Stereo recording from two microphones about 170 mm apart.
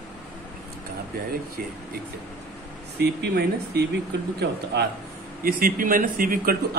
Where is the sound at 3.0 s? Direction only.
75° right (ahead or behind).